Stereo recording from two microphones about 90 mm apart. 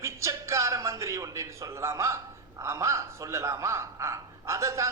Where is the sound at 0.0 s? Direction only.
30° right (ahead or behind).